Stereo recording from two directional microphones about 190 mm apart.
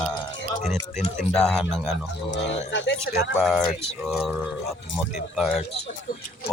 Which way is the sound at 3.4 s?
Centre (ahead or behind).